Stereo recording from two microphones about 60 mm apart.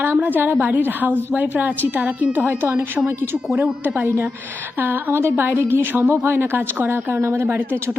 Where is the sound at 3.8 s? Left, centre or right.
Right.